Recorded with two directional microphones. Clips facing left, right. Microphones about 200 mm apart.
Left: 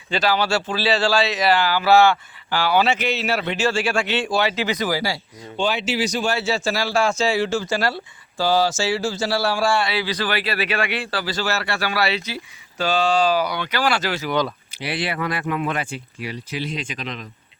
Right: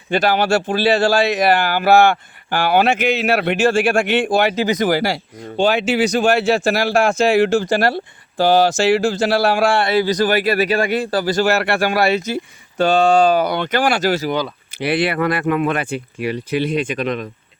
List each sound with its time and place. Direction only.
0.1 s a man's voice: 50° right (ahead or behind)
14.8 s speech: 60° right (ahead or behind)